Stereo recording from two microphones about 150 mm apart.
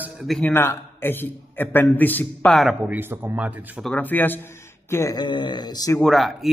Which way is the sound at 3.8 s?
10° left (ahead or behind).